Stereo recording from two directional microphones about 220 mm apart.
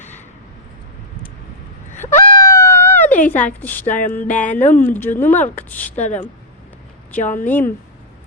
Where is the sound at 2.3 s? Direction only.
15° left (ahead or behind).